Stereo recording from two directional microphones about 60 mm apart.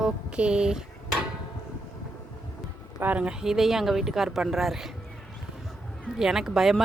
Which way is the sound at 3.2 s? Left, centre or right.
Centre.